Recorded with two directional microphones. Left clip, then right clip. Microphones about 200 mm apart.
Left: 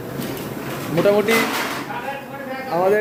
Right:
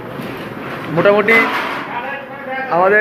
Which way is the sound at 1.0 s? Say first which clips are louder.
Right 5 dB; 15° left (ahead or behind).